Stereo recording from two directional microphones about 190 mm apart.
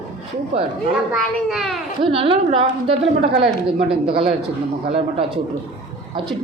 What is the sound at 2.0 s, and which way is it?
A woman's voice, 30° right (ahead or behind).